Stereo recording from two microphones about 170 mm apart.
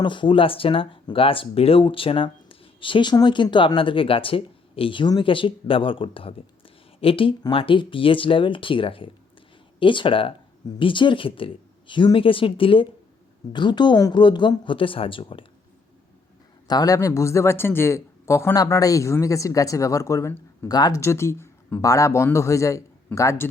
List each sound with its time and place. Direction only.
0.0 s speech: 30° left (ahead or behind)
16.6 s speech: 20° left (ahead or behind)